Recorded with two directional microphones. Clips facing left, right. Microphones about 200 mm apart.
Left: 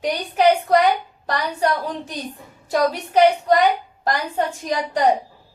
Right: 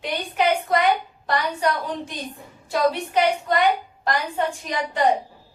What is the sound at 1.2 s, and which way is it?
A woman's voice, 40° left (ahead or behind).